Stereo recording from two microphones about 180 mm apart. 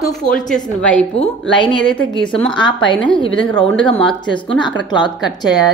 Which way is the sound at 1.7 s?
5° left (ahead or behind).